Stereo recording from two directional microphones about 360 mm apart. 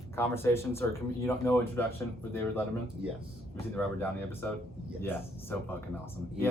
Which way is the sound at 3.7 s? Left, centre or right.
Centre.